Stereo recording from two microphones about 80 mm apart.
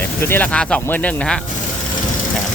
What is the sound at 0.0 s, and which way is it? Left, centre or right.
Speech, left.